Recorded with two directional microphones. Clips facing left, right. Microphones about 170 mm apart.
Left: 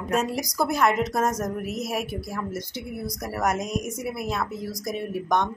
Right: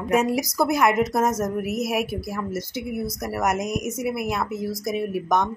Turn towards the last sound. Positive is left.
turn(degrees=-5)  # may be behind; listen again after turning